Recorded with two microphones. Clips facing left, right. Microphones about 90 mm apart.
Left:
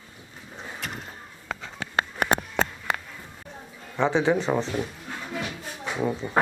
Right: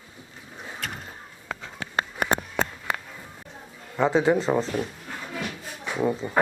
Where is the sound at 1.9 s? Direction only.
70° left (ahead or behind).